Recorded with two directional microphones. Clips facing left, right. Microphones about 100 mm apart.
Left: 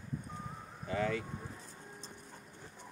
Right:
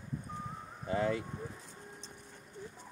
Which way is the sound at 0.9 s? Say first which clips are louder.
Right 2 dB; 25° right (ahead or behind).